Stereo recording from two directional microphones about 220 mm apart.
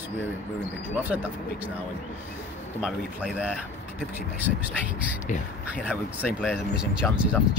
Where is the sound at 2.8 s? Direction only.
5° right (ahead or behind).